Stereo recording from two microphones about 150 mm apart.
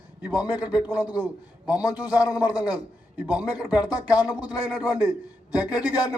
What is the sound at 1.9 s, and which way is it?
Speech, 25° left (ahead or behind).